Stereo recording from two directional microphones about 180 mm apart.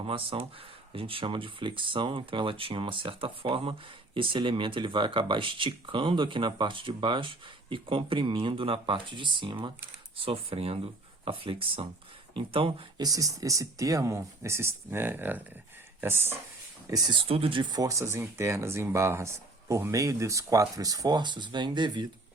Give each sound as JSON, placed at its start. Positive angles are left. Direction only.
{"t": 0.0, "sound": "speech", "side_deg": -30}
{"t": 16.9, "sound": "speech", "side_deg": -25}